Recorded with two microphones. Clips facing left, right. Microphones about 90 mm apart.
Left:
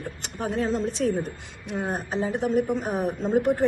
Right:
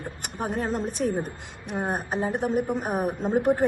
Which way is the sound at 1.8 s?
55° right (ahead or behind).